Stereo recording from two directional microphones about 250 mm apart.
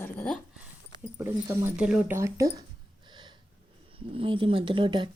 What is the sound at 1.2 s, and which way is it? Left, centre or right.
Speech, centre.